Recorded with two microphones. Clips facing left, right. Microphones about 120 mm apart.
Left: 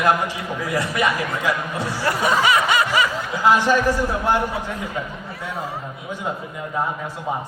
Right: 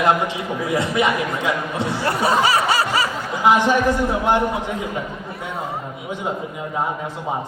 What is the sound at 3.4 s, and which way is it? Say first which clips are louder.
A man's voice: right 1 dB; 20° right (ahead or behind).